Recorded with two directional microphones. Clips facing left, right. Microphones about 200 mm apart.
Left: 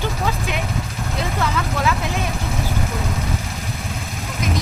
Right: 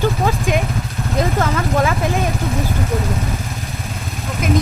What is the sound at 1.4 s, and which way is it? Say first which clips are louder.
Speech: right 2 dB; 45° right (ahead or behind).